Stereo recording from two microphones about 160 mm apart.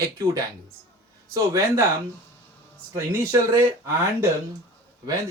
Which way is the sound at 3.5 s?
15° right (ahead or behind).